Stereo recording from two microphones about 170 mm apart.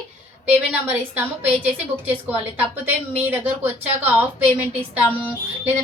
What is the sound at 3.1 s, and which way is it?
A woman's voice, 10° right (ahead or behind).